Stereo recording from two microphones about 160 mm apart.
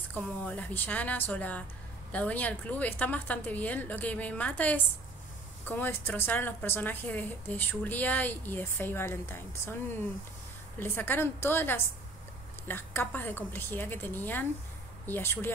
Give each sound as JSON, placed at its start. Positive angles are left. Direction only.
{"t": 0.1, "sound": "a woman's voice", "side_deg": 10}
{"t": 10.8, "sound": "a woman's voice", "side_deg": 15}